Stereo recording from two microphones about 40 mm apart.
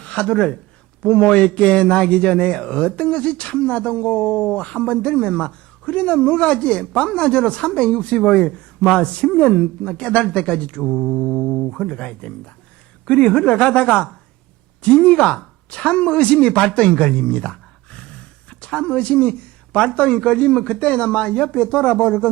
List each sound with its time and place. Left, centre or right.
0.0 s a man's voice: left
10.9 s mantra: centre
11.7 s a man's voice: centre